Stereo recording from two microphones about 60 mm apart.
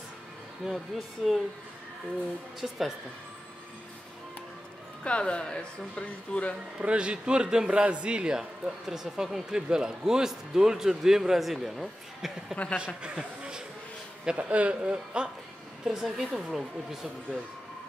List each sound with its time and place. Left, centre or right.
0.7 s a woman's voice: centre
2.6 s a woman's voice: centre
5.0 s speech: centre
6.8 s a man's voice: centre
12.7 s a man's voice: centre
15.8 s a woman's voice: centre